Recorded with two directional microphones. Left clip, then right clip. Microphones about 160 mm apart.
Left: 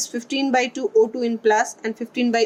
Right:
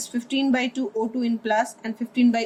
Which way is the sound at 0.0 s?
50° left (ahead or behind).